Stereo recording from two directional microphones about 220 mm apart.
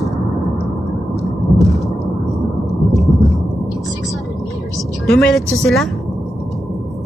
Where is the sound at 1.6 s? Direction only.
Centre (ahead or behind).